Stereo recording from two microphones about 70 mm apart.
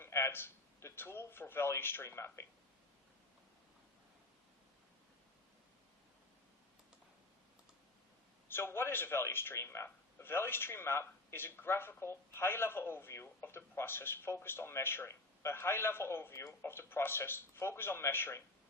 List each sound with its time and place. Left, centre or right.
0.0 s a man's voice: left
8.4 s a man's voice: left